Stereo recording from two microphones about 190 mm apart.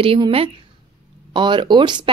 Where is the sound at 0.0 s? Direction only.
30° right (ahead or behind).